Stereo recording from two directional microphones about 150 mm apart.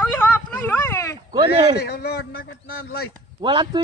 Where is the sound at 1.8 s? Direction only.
90° left.